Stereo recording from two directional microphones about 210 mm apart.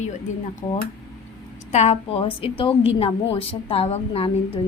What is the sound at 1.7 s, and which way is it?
A woman's voice, 30° left (ahead or behind).